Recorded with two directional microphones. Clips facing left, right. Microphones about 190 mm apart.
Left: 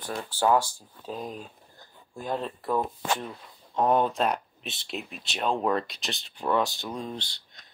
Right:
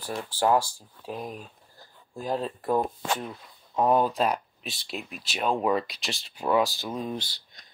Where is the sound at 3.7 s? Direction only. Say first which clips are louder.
Right 1 dB; centre (ahead or behind).